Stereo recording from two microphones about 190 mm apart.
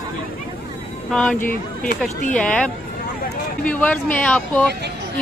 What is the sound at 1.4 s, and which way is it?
Speech, 50° left (ahead or behind).